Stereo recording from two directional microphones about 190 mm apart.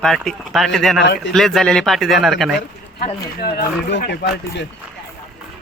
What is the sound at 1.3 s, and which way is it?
Speech, centre (ahead or behind).